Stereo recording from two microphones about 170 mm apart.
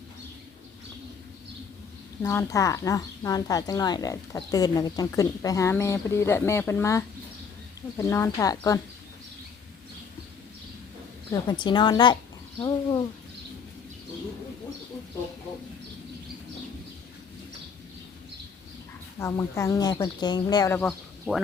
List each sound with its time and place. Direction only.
2.2 s speech: 15° left (ahead or behind)
11.3 s speech: 25° left (ahead or behind)
19.2 s speech: 15° left (ahead or behind)
20.7 s speech: 5° left (ahead or behind)